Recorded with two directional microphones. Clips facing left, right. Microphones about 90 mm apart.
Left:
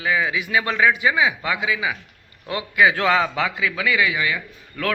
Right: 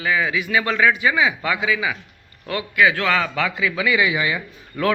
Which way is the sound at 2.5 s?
20° left (ahead or behind).